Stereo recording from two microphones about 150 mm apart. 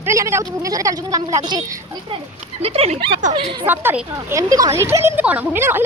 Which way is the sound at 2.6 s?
40° right (ahead or behind).